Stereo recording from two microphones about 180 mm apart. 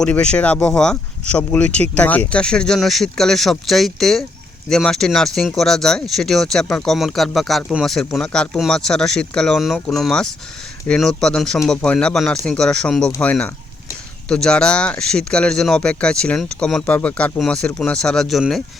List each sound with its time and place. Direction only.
0.0 s speech: 5° left (ahead or behind)
13.1 s speech: 15° left (ahead or behind)
14.3 s speech: 5° left (ahead or behind)